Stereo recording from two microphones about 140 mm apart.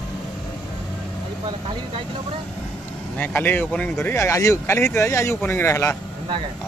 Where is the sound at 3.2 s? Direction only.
15° left (ahead or behind).